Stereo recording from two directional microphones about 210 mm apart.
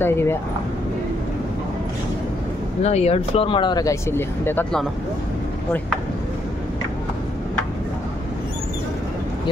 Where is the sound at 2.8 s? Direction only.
30° left (ahead or behind); by 4.8 s 10° left (ahead or behind).